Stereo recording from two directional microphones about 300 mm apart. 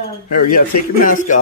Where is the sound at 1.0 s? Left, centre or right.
Left.